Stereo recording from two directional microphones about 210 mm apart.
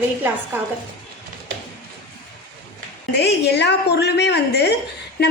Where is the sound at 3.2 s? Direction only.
50° left (ahead or behind).